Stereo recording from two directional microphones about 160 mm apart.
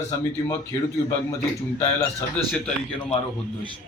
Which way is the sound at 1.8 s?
10° left (ahead or behind).